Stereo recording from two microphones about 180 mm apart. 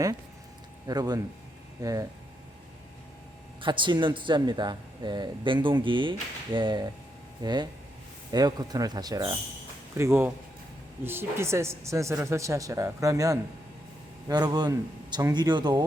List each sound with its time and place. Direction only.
0.9 s a man's voice: 20° right (ahead or behind)
3.6 s a man's voice: 25° right (ahead or behind)